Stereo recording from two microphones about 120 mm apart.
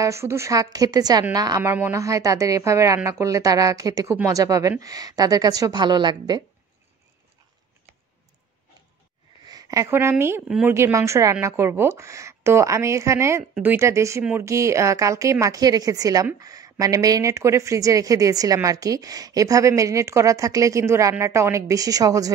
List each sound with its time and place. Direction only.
0.0 s a woman's voice: 25° right (ahead or behind)
1.6 s a woman's voice: 20° right (ahead or behind); by 6.4 s 35° right (ahead or behind)
9.5 s a woman's voice: 30° right (ahead or behind)